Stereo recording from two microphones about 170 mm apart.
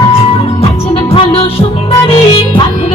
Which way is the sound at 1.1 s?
35° left (ahead or behind).